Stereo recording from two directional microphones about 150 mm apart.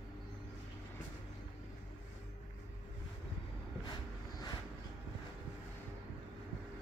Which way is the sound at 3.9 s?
25° left (ahead or behind).